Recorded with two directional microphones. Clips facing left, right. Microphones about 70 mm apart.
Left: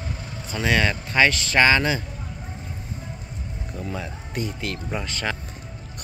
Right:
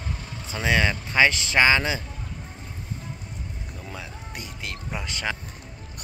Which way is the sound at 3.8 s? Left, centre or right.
Centre.